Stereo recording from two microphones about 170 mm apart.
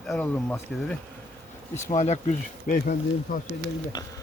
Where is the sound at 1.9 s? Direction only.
45° left (ahead or behind).